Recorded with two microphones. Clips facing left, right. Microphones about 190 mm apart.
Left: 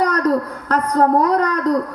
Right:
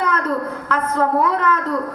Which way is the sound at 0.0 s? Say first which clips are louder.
Left 4 dB; 40° left (ahead or behind).